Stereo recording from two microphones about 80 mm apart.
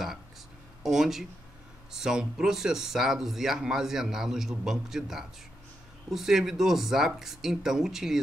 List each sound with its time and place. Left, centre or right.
0.8 s speech: centre